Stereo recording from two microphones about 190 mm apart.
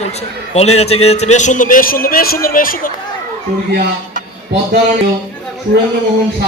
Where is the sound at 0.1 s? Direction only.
35° left (ahead or behind).